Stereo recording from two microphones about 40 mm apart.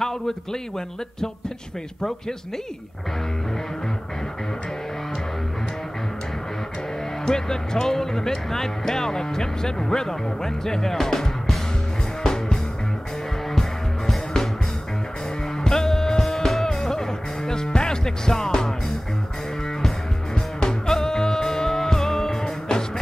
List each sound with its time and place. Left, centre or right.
0.0 s speech: centre
7.2 s speech: centre
12.2 s music: centre
15.6 s music: centre
20.6 s music: centre